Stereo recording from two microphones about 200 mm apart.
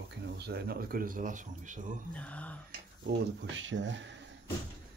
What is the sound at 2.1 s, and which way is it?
Speech, 5° left (ahead or behind).